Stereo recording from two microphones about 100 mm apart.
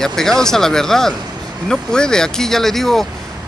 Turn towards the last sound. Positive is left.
turn(degrees=5)  # may be behind; listen again after turning